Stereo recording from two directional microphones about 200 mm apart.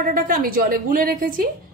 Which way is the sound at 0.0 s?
45° right (ahead or behind).